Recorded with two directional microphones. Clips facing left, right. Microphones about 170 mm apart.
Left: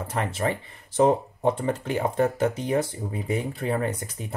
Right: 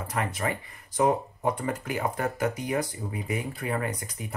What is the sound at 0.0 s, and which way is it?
Speech, 25° left (ahead or behind).